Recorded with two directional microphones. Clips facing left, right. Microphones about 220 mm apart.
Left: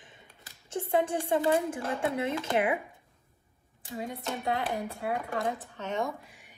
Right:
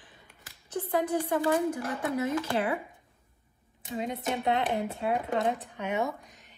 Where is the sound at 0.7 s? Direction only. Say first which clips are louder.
Even; 25° left (ahead or behind).